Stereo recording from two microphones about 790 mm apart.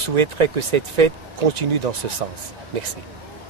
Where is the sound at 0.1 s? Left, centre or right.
Right.